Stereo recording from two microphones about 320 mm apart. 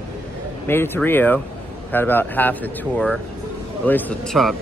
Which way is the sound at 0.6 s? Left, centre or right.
Centre.